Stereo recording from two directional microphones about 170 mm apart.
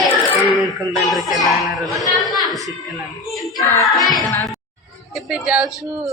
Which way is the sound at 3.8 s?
Centre (ahead or behind).